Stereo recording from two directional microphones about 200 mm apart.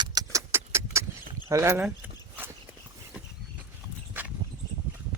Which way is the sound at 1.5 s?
15° right (ahead or behind).